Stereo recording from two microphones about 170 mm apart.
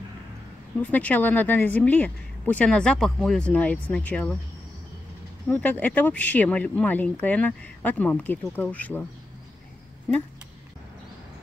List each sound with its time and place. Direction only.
0.7 s a woman's voice: 10° left (ahead or behind)
5.5 s a woman's voice: 10° left (ahead or behind)